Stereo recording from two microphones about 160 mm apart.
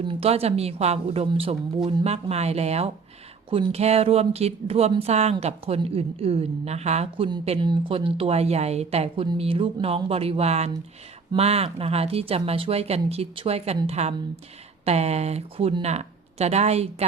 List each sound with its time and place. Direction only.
0.0 s speech: 35° right (ahead or behind)